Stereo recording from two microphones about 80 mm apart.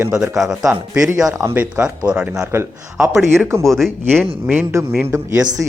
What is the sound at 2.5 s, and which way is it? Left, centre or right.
Speech, right.